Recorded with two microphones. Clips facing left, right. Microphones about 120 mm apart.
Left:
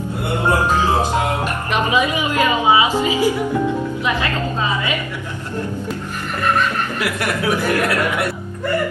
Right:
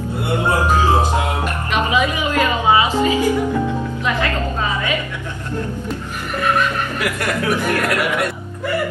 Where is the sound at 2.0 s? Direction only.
15° left (ahead or behind).